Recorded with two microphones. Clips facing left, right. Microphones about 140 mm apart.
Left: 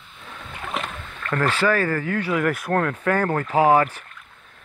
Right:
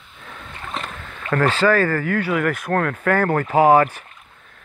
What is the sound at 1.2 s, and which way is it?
Speech, 10° right (ahead or behind).